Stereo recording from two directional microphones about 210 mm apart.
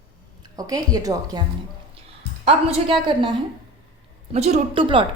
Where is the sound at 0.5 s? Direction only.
15° right (ahead or behind).